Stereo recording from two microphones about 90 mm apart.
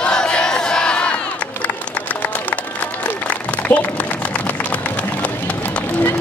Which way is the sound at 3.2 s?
15° left (ahead or behind).